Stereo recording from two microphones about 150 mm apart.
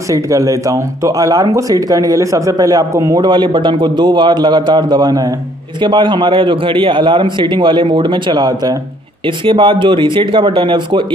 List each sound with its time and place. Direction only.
0.1 s a man's voice: 20° right (ahead or behind)